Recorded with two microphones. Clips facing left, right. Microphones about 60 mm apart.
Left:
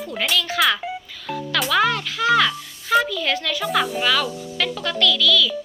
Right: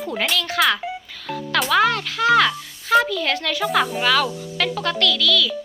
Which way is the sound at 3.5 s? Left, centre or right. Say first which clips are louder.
Right 3 dB; centre.